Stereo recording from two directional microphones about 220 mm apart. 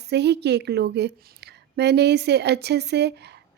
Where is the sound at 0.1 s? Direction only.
50° right (ahead or behind).